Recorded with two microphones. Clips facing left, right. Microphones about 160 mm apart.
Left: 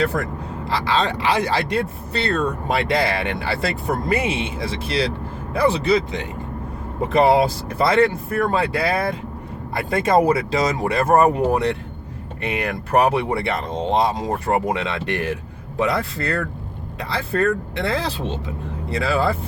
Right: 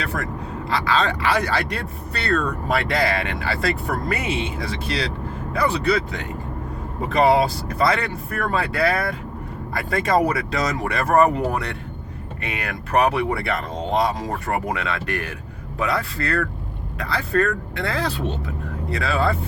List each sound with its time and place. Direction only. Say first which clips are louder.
0.0 s speech: left 5 dB; 30° left (ahead or behind)